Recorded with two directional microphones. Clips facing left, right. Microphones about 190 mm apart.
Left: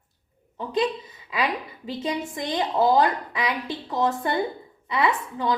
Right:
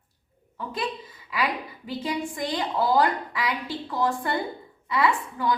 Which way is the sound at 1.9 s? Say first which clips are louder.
Left 1 dB; 20° left (ahead or behind).